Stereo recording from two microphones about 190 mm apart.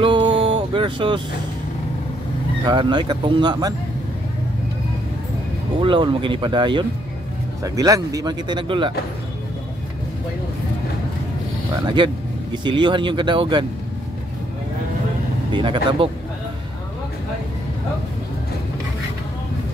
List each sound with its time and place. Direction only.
0.0 s a sound: 25° right (ahead or behind)
2.6 s speech: 25° right (ahead or behind)
5.8 s speech: 25° right (ahead or behind)
12.6 s speech: 25° right (ahead or behind)
15.5 s speech: 25° right (ahead or behind)